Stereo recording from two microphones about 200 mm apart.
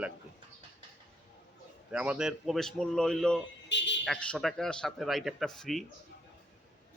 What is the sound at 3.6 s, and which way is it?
Speech, 65° left (ahead or behind).